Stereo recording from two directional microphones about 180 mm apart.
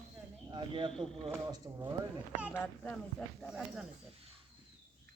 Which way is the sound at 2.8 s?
5° left (ahead or behind).